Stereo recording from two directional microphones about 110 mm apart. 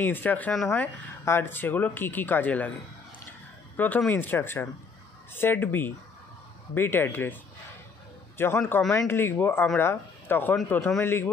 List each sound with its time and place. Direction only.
0.0 s speech: 15° left (ahead or behind)
3.7 s speech: 15° left (ahead or behind)
8.4 s speech: 20° left (ahead or behind)
11.0 s speech: 20° left (ahead or behind)